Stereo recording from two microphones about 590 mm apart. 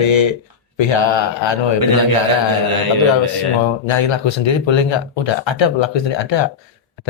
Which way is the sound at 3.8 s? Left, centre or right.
Left.